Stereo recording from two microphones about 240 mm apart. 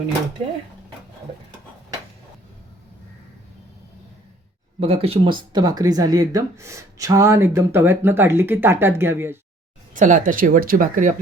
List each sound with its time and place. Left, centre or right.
4.8 s speech: right
9.9 s speech: right